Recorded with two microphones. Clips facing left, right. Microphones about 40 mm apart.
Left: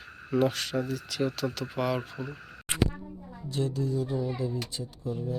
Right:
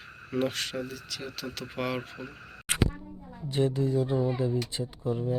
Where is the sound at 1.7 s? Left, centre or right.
Right.